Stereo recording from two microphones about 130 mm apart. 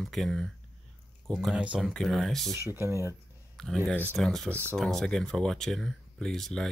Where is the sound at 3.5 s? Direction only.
Centre (ahead or behind).